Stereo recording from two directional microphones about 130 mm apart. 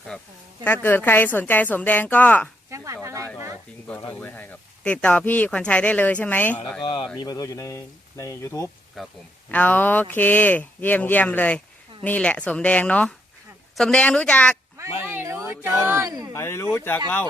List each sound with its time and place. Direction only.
0.6 s speech: 15° left (ahead or behind)
2.6 s speech: 25° right (ahead or behind)
4.2 s speech: 10° left (ahead or behind)
6.8 s speech: 40° left (ahead or behind); by 8.7 s 20° left (ahead or behind)
9.0 s speech: centre (ahead or behind)
9.5 s speech: 10° left (ahead or behind)
15.0 s a sound: 20° right (ahead or behind)
16.3 s speech: 20° left (ahead or behind)